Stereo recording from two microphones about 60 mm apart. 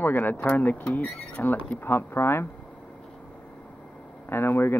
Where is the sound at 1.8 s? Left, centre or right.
Left.